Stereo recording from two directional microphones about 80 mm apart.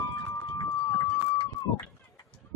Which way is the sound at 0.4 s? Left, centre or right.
Left.